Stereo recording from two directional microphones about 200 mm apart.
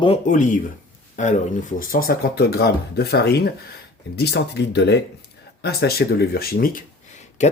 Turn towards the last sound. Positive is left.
turn(degrees=35)  # may be behind; listen again after turning